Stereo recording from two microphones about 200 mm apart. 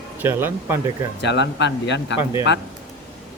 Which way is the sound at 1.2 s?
60° left (ahead or behind).